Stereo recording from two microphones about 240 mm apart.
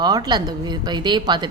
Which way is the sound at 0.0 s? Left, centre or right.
Centre.